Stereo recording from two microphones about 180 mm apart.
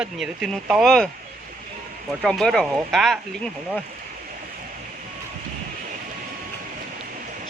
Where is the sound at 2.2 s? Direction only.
Centre (ahead or behind).